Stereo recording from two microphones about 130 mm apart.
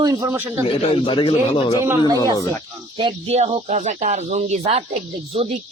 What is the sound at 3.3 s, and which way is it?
Speech, 55° right (ahead or behind).